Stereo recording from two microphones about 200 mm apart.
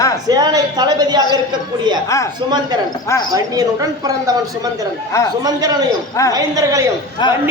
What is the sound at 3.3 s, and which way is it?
Speech, 15° right (ahead or behind).